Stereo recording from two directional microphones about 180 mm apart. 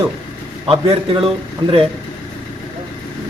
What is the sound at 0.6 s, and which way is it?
Speech, 30° right (ahead or behind).